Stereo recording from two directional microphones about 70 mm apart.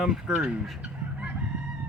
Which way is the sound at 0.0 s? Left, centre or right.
Centre.